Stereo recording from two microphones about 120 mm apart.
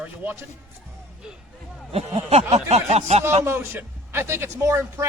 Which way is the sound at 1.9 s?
55° right (ahead or behind).